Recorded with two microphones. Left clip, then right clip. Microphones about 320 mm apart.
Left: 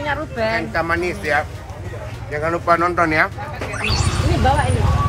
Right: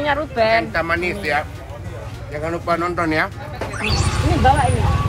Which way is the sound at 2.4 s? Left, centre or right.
Centre.